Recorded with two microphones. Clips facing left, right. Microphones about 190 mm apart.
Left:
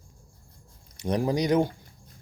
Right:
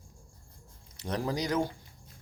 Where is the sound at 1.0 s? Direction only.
15° left (ahead or behind).